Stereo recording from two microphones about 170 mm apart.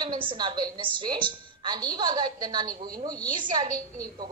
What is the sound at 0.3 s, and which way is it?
A woman's voice, 30° right (ahead or behind).